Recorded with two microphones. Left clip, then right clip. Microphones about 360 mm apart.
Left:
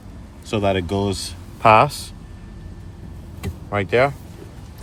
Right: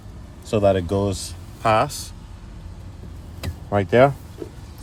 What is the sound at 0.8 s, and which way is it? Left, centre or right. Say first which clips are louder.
Speech: even; right.